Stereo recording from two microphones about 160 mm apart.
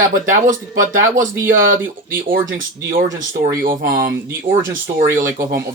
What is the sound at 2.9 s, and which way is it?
Speech, 65° right (ahead or behind).